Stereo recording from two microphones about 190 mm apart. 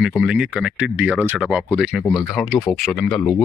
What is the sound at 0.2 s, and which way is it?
Speech, 5° right (ahead or behind).